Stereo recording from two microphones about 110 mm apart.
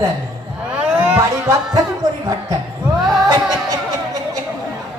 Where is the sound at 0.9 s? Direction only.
10° right (ahead or behind).